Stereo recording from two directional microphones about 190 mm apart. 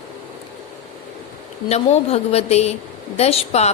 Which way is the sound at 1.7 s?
35° left (ahead or behind).